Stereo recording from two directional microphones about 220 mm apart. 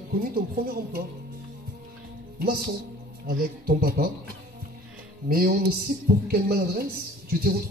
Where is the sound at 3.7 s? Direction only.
45° right (ahead or behind).